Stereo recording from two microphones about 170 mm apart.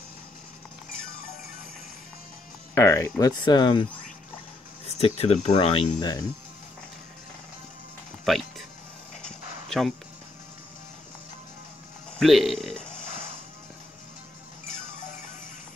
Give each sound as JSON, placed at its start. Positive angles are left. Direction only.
{"t": 2.7, "sound": "speech", "side_deg": 15}
{"t": 4.8, "sound": "speech", "side_deg": 35}
{"t": 5.9, "sound": "speech", "side_deg": 20}
{"t": 8.3, "sound": "a man's voice", "side_deg": 0}
{"t": 9.7, "sound": "speech", "side_deg": 0}
{"t": 12.2, "sound": "a man's voice", "side_deg": 0}
{"t": 12.9, "sound": "music", "side_deg": 50}